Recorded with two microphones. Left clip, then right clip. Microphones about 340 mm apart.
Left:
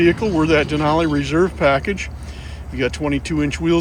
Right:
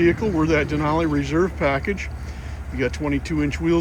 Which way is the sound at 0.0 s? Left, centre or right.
Centre.